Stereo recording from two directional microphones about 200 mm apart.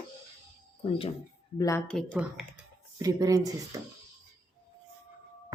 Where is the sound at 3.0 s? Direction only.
15° right (ahead or behind).